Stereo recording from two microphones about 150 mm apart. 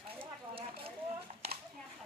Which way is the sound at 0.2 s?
40° right (ahead or behind).